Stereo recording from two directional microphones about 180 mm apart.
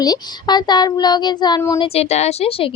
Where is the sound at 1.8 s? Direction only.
35° left (ahead or behind).